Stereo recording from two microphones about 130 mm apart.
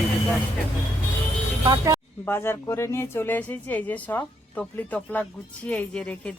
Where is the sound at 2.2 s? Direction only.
20° left (ahead or behind).